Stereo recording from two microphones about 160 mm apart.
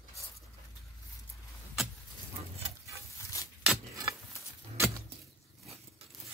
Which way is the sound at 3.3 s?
20° left (ahead or behind).